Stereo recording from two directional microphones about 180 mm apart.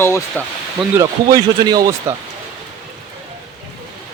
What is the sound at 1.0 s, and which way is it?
Speech, 20° right (ahead or behind).